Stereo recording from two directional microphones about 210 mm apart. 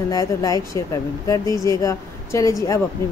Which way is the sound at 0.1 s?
15° left (ahead or behind).